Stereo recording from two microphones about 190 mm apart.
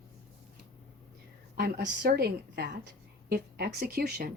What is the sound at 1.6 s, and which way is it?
A woman's voice, 55° right (ahead or behind).